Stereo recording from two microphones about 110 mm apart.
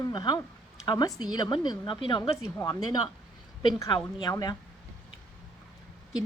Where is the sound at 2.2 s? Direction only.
30° left (ahead or behind).